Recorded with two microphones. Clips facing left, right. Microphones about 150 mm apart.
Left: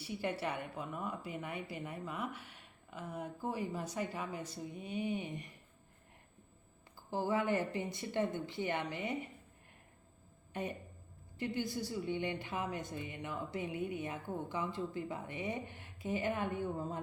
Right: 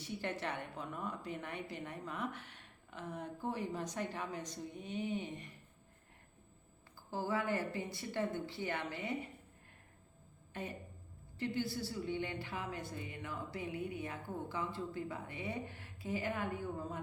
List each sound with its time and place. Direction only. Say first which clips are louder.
0.0 s a woman's voice: left 3 dB; 10° left (ahead or behind)
7.1 s a woman's voice: left 3 dB; 20° left (ahead or behind)
10.5 s a woman's voice: left 4 dB; 20° left (ahead or behind)